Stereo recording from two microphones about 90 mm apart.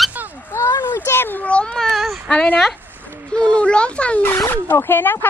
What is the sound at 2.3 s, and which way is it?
A woman's voice, 10° left (ahead or behind).